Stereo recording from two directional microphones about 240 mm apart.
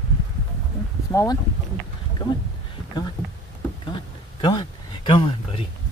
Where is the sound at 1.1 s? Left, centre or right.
Centre.